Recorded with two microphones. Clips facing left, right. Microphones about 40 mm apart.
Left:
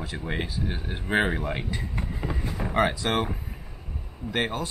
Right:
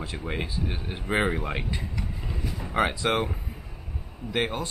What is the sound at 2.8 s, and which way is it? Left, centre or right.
Speech, centre.